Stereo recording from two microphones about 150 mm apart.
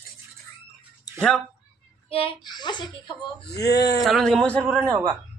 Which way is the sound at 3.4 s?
90° left.